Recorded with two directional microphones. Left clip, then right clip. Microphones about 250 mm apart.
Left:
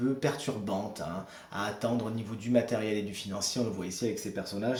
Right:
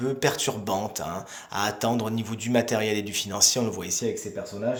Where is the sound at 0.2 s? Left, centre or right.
Right.